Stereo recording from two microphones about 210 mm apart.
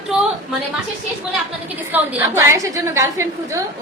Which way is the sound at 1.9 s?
10° right (ahead or behind).